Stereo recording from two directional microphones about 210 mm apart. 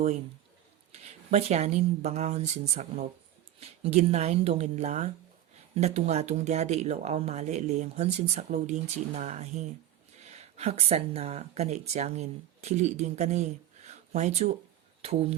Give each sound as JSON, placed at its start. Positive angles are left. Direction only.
{"t": 0.9, "sound": "a woman's voice", "side_deg": -30}